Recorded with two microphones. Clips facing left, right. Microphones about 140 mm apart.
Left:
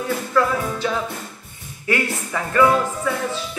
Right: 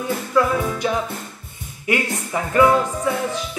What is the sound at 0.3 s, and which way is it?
Speech, 15° right (ahead or behind).